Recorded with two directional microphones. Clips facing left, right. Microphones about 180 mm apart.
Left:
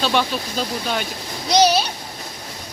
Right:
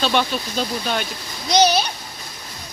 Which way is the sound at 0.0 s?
5° left (ahead or behind).